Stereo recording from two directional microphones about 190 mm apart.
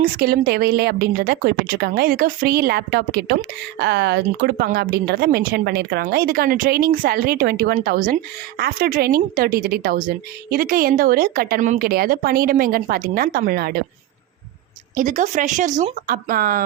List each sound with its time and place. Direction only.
0.0 s a woman's voice: 55° right (ahead or behind)
14.9 s a woman's voice: 45° right (ahead or behind)